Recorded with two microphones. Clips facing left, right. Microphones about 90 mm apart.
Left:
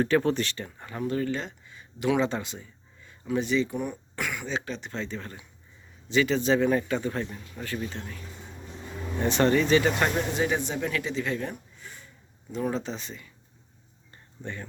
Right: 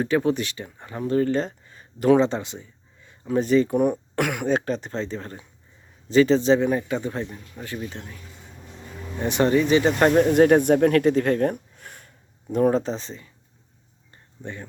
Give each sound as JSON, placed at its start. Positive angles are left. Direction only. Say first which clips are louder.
{"t": 0.0, "sound": "speech", "louder": "right 2 dB", "side_deg": -15}
{"t": 3.3, "sound": "a man's voice", "louder": "right 7 dB", "side_deg": -45}
{"t": 9.8, "sound": "a man's voice", "louder": "right 8 dB", "side_deg": -40}
{"t": 10.3, "sound": "speech", "louder": "right 12 dB", "side_deg": -55}
{"t": 14.4, "sound": "speech", "louder": "right 2 dB", "side_deg": -15}